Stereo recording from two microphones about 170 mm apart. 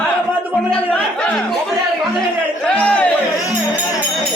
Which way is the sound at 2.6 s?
5° left (ahead or behind).